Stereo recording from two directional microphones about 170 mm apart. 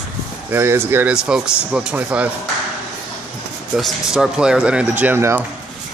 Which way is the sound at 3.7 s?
Centre (ahead or behind).